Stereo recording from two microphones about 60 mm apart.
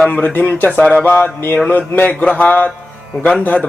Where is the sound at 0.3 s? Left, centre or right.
Left.